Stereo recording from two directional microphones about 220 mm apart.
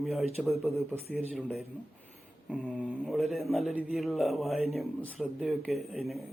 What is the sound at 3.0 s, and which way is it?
A man's voice, centre (ahead or behind).